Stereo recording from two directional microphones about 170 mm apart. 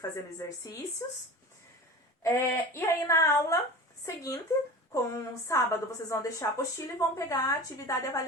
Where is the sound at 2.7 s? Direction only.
20° left (ahead or behind).